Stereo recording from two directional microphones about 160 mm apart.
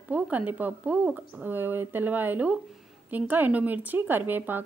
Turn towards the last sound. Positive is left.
turn(degrees=-10)  # may be behind; listen again after turning